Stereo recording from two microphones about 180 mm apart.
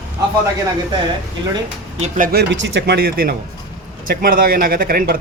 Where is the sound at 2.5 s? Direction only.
75° right (ahead or behind); by 5.1 s 55° right (ahead or behind).